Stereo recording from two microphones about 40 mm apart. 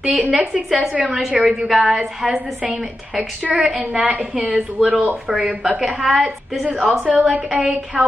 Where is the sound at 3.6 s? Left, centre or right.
Right.